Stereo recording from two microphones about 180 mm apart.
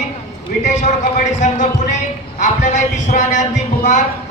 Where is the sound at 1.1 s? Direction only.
45° left (ahead or behind).